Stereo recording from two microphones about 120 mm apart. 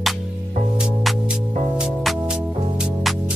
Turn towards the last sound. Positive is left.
turn(degrees=-5)  # may be behind; listen again after turning